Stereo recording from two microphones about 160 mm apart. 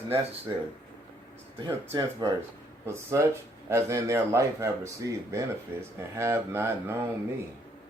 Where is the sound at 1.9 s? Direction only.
20° right (ahead or behind).